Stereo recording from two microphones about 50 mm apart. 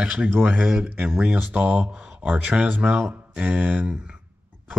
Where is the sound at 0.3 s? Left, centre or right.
Right.